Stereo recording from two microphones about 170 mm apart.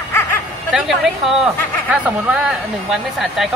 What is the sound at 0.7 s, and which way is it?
Speech, centre (ahead or behind).